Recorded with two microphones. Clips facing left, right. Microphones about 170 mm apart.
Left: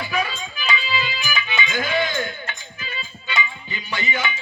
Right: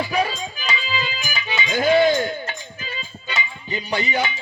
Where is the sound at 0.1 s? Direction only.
40° right (ahead or behind).